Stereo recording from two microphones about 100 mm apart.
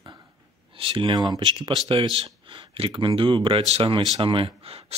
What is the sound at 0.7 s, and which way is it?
Speech, 60° right (ahead or behind).